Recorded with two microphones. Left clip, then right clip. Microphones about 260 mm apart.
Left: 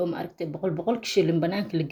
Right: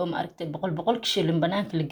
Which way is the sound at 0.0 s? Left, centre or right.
Centre.